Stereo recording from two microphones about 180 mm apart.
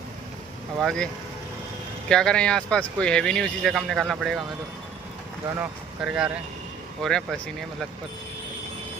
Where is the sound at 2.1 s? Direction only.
5° left (ahead or behind).